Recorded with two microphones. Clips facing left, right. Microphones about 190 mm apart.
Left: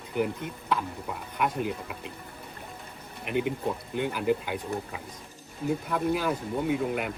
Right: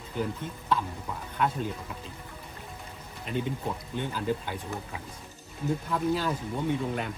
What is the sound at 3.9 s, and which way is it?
Speech, 15° left (ahead or behind).